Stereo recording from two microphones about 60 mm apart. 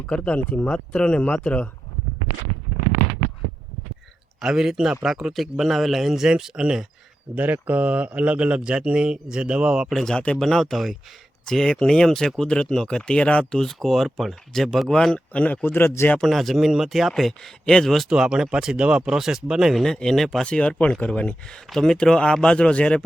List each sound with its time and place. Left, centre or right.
0.1 s speech: left
4.4 s speech: centre
7.3 s speech: right
9.9 s speech: centre
13.6 s speech: centre
15.3 s a man's voice: left
16.2 s speech: centre
18.1 s speech: centre
19.8 s speech: centre
20.4 s speech: centre